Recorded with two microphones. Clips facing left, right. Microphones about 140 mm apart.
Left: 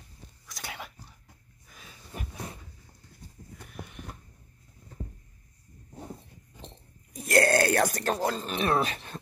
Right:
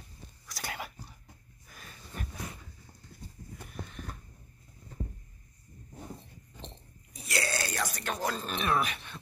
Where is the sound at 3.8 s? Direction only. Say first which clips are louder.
Even; 15° left (ahead or behind).